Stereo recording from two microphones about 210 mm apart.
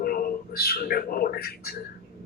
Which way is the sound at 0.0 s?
45° left (ahead or behind).